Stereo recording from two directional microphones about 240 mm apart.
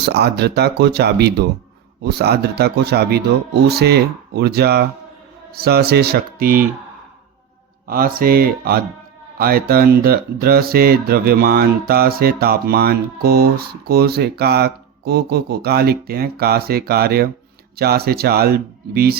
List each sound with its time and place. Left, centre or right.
0.0 s speech: right
7.9 s speech: right